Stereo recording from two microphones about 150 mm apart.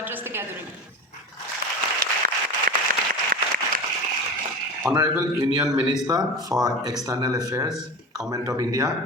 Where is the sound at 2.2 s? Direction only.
85° right.